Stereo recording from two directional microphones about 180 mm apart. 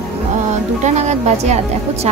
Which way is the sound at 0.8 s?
40° right (ahead or behind).